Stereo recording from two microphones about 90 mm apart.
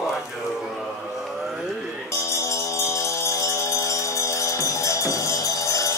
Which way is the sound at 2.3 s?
35° left (ahead or behind).